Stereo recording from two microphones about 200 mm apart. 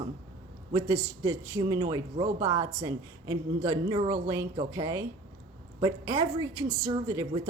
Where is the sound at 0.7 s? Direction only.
15° right (ahead or behind).